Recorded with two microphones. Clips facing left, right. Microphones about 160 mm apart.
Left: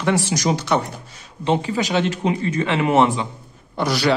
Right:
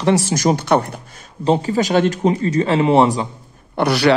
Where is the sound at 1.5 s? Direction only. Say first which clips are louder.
Right 4 dB; 40° right (ahead or behind).